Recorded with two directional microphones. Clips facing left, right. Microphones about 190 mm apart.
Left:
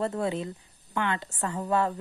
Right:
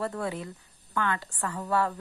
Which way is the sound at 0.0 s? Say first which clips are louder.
Left 3 dB; 25° left (ahead or behind).